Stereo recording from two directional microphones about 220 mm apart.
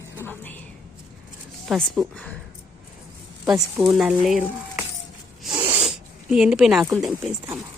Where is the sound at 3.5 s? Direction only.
5° right (ahead or behind).